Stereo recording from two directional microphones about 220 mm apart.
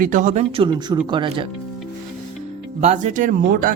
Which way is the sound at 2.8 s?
35° right (ahead or behind).